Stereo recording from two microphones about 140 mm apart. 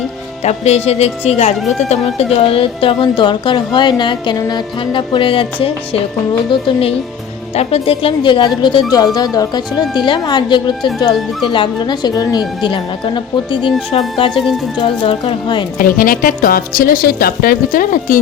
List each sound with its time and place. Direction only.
0.4 s speech: 50° left (ahead or behind)
1.5 s speech: centre (ahead or behind)
1.8 s speech: 50° left (ahead or behind)
15.8 s a woman's voice: 90° left; by 18.2 s 75° left (ahead or behind)